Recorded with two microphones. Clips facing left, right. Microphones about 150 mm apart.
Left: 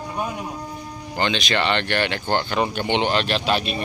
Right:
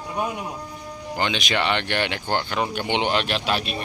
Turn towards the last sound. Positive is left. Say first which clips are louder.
# left 3 dB
turn(degrees=-5)  # may be behind; listen again after turning